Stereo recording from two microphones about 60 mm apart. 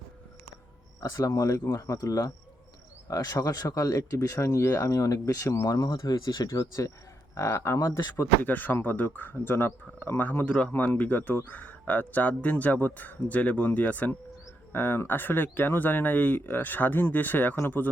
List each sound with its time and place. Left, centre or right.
1.0 s speech: left
7.3 s speech: left
8.4 s speech: left
14.7 s speech: left